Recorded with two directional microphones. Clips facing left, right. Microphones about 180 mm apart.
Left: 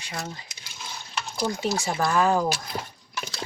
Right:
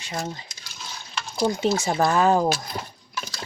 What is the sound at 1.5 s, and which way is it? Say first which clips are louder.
Speech: right 5 dB; 20° right (ahead or behind).